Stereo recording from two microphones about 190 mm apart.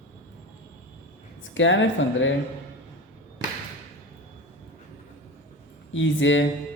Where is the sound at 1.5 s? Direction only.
80° left.